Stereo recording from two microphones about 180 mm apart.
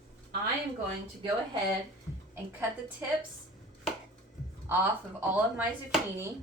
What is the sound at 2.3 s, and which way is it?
Speech, 10° right (ahead or behind).